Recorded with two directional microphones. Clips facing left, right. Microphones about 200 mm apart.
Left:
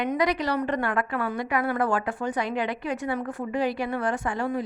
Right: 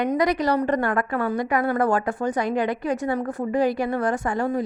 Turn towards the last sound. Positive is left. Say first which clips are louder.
# right 4 dB
turn(degrees=-45)  # may be behind; listen again after turning